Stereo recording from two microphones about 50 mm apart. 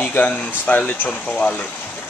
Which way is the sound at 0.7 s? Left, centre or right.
Left.